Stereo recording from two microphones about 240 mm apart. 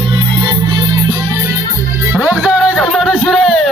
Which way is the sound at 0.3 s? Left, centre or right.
Centre.